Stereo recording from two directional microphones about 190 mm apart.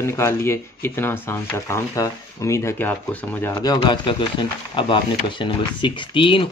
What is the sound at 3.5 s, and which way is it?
Speech, 20° left (ahead or behind).